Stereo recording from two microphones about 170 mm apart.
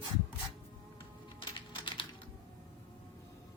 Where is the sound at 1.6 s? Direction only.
30° left (ahead or behind).